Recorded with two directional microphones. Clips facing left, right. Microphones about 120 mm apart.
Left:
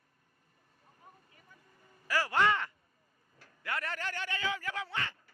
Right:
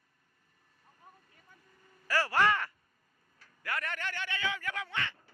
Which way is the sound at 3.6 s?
25° left (ahead or behind).